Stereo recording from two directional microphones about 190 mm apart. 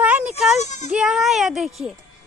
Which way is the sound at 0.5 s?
40° left (ahead or behind).